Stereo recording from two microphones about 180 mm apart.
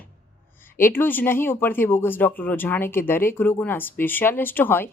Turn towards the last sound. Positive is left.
turn(degrees=10)  # may be behind; listen again after turning